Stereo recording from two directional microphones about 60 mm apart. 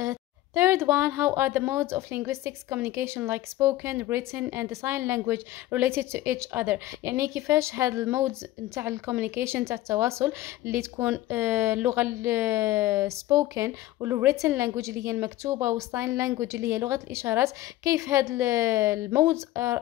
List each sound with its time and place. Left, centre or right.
0.6 s a woman's voice: right
4.4 s a woman's voice: right
4.6 s a woman's voice: right
7.1 s a woman's voice: right
13.7 s a woman's voice: right
17.8 s a woman's voice: right